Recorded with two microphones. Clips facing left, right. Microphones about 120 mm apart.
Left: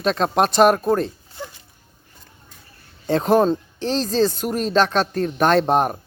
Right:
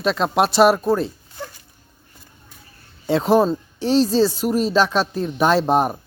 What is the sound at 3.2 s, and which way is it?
Speech, 5° right (ahead or behind).